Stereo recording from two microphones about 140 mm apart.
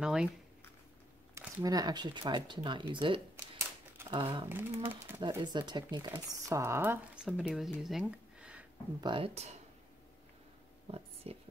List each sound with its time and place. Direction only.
0.0 s speech: 5° right (ahead or behind)
1.6 s speech: 25° right (ahead or behind)
4.5 s a sound: 15° right (ahead or behind)
5.4 s speech: 30° right (ahead or behind)
7.2 s speech: 5° right (ahead or behind)
9.0 s speech: 40° right (ahead or behind)
10.9 s speech: 45° right (ahead or behind)